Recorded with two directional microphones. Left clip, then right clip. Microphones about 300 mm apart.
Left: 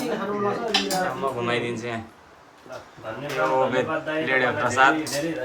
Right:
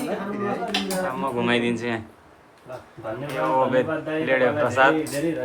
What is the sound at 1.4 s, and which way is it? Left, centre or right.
Speech, right.